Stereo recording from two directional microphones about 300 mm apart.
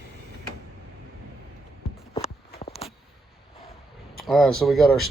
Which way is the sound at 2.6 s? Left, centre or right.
Centre.